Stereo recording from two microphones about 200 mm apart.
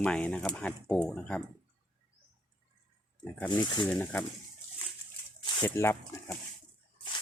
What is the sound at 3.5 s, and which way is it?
Speech, 20° left (ahead or behind).